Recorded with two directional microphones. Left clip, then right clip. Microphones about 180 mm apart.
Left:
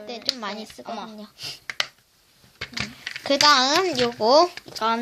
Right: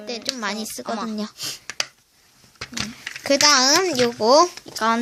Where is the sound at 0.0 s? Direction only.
20° right (ahead or behind).